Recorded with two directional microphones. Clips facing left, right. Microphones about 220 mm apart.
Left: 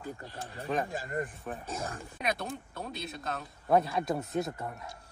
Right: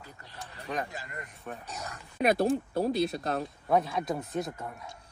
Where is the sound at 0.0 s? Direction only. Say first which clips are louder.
Left 7 dB; 45° left (ahead or behind).